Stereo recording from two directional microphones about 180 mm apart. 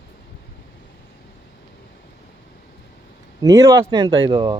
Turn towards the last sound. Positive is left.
turn(degrees=-25)  # may be behind; listen again after turning